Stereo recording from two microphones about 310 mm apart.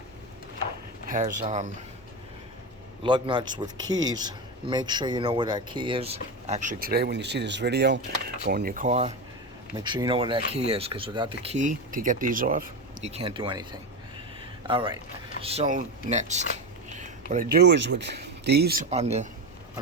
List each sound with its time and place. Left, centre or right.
1.0 s speech: right
3.0 s a man's voice: centre
14.7 s a man's voice: centre